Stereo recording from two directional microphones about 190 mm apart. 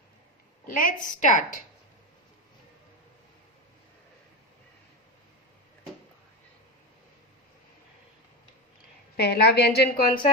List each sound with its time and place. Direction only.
0.6 s a woman's voice: 45° left (ahead or behind)
9.1 s a woman's voice: 55° left (ahead or behind)